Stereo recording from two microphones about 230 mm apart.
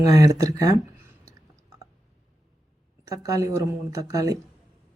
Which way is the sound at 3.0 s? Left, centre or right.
Centre.